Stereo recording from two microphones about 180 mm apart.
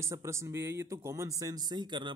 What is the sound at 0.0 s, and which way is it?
A man's voice, 15° right (ahead or behind).